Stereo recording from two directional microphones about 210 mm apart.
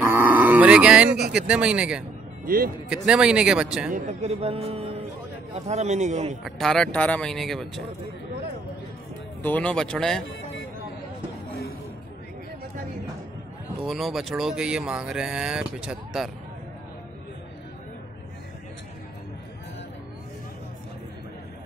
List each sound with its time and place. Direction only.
0.0 s livestock: 10° right (ahead or behind)
1.3 s speech: 5° right (ahead or behind)
2.4 s speech: 45° right (ahead or behind)
2.9 s speech: 5° right (ahead or behind)
3.9 s a man's voice: 30° right (ahead or behind)
6.4 s speech: centre (ahead or behind)
9.4 s speech: 5° left (ahead or behind)
13.8 s speech: centre (ahead or behind)